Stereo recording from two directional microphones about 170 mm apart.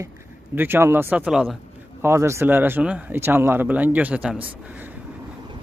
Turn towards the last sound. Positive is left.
turn(degrees=-5)  # may be behind; listen again after turning